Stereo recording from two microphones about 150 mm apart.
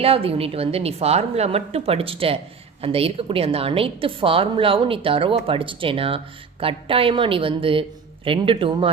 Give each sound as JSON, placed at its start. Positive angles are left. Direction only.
{"t": 0.0, "sound": "a woman's voice", "side_deg": -40}